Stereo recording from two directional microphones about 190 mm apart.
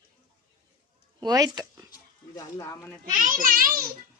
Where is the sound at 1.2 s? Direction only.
20° right (ahead or behind).